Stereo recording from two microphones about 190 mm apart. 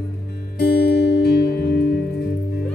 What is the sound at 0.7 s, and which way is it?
Music, 60° left (ahead or behind).